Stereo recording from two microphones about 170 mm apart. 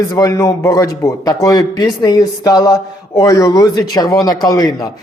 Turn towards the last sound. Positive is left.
turn(degrees=25)  # may be behind; listen again after turning